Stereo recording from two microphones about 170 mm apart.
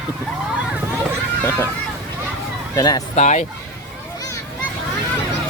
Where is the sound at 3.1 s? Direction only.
45° left (ahead or behind).